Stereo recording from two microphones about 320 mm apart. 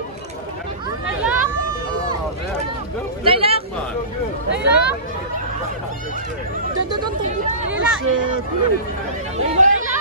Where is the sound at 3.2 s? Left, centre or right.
Centre.